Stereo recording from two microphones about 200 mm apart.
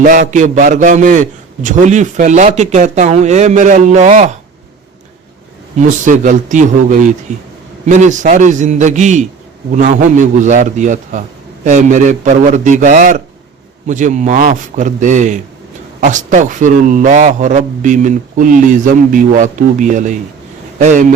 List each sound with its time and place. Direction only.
0.0 s a man's voice: 40° right (ahead or behind)
6.1 s a man's voice: 40° right (ahead or behind)